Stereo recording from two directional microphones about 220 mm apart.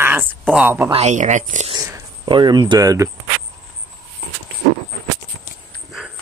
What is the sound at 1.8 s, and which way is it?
Speech, 20° right (ahead or behind).